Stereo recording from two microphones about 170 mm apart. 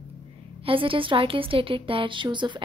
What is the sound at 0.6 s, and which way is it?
A woman's voice, 30° right (ahead or behind).